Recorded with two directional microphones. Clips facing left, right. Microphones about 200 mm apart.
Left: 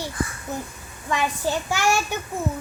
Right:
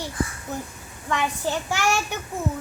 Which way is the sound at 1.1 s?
10° left (ahead or behind).